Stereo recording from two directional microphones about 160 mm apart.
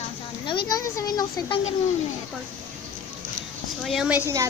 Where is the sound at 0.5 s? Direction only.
25° left (ahead or behind).